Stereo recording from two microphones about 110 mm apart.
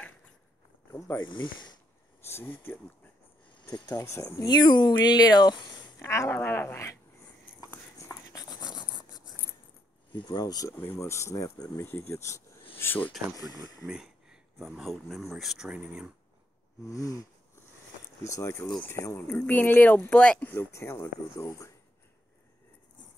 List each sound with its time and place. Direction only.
0.9 s speech: 25° left (ahead or behind)
1.2 s speech: 45° left (ahead or behind)
2.2 s speech: 20° left (ahead or behind)
3.6 s speech: 40° left (ahead or behind)
4.0 s speech: 25° left (ahead or behind)
5.9 s speech: 25° left (ahead or behind)
7.7 s a sound: 30° left (ahead or behind)
10.1 s speech: 40° left (ahead or behind)
11.0 s speech: 25° left (ahead or behind)
11.7 s speech: 20° left (ahead or behind)
13.8 s speech: 5° right (ahead or behind)
16.8 s speech: 30° left (ahead or behind)
18.3 s speech: 25° left (ahead or behind)